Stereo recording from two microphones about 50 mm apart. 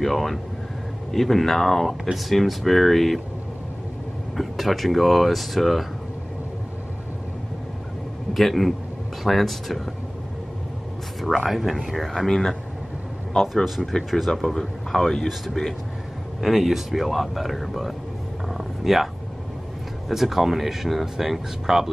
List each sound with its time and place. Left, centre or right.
0.0 s speech: centre
4.4 s speech: centre
8.3 s a man's voice: centre
11.1 s speech: centre
13.9 s speech: centre
18.5 s a sound: centre
20.1 s speech: centre